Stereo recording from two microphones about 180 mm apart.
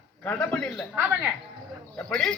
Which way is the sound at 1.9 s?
5° left (ahead or behind).